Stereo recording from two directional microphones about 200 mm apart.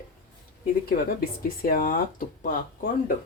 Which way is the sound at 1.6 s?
45° left (ahead or behind).